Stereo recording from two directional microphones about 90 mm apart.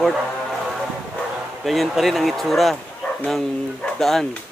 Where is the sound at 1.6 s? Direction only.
Centre (ahead or behind).